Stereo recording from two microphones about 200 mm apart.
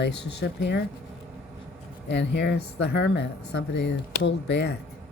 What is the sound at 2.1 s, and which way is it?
Speech, 60° left (ahead or behind).